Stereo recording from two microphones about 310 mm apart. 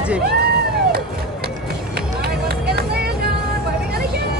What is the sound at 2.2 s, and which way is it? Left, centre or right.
Vehicle, right.